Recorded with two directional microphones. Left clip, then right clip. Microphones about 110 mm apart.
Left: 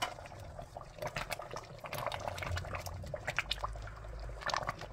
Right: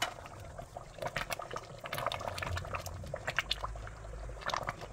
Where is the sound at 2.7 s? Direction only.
10° right (ahead or behind).